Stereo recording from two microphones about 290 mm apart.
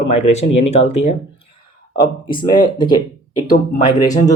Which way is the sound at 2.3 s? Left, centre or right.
Centre.